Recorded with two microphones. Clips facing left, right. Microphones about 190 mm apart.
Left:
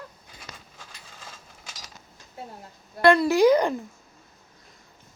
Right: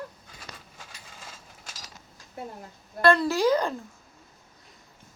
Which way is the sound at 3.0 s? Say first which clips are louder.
Left 4 dB; 15° left (ahead or behind).